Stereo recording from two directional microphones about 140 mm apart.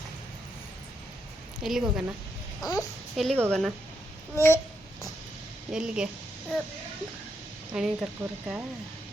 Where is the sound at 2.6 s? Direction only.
25° left (ahead or behind).